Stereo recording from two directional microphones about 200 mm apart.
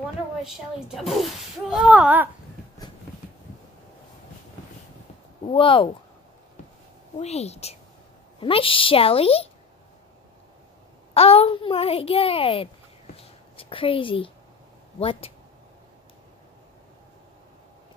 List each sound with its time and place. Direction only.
0.4 s speech: centre (ahead or behind)
5.5 s a child's voice: 25° left (ahead or behind)
7.2 s a woman's voice: 30° left (ahead or behind)
11.1 s a child's voice: 30° left (ahead or behind)
13.1 s a sound: 25° left (ahead or behind)
15.0 s a child's voice: 30° left (ahead or behind)